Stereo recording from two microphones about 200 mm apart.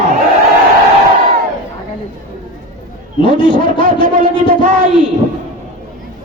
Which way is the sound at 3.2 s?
25° left (ahead or behind).